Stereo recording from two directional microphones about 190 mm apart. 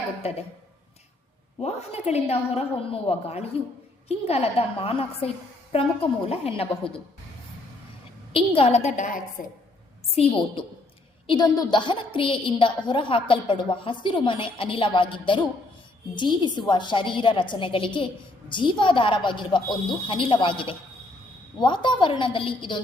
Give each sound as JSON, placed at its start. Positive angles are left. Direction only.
{"t": 0.2, "sound": "a woman's voice", "side_deg": 30}
{"t": 1.5, "sound": "a woman's voice", "side_deg": 35}
{"t": 8.3, "sound": "a woman's voice", "side_deg": 30}
{"t": 10.2, "sound": "a woman's voice", "side_deg": 30}